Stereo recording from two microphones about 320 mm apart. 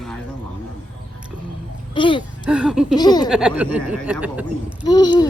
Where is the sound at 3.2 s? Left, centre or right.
Centre.